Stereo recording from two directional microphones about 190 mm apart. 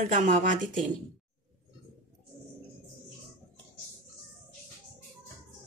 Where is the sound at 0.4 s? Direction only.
45° right (ahead or behind).